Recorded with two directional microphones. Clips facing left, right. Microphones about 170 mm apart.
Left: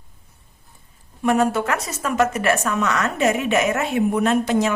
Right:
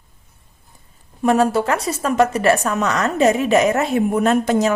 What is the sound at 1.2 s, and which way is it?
Speech, 35° right (ahead or behind).